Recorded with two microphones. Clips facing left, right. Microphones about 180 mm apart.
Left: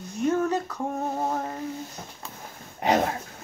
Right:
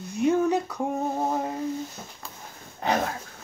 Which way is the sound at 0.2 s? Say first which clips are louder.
Right 2 dB; 10° right (ahead or behind).